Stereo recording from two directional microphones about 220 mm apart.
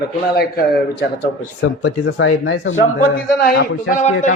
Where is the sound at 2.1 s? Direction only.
70° left (ahead or behind).